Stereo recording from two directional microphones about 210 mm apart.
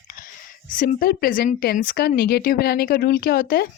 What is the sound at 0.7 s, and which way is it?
Speech, 40° left (ahead or behind).